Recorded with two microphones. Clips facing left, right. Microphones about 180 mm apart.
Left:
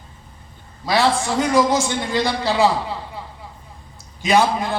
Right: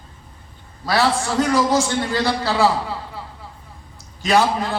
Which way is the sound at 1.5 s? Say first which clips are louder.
Left 2 dB; 15° left (ahead or behind).